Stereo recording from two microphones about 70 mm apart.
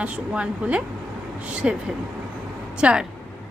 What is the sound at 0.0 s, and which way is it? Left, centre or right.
A woman's voice, centre.